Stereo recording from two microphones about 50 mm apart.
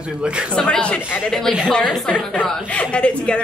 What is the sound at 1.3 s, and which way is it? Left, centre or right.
Speech, centre.